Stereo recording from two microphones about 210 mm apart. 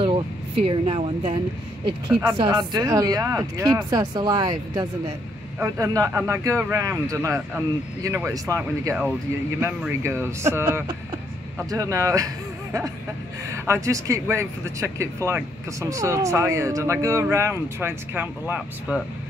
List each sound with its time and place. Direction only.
0.0 s speech: 25° right (ahead or behind)
13.7 s speech: 15° right (ahead or behind)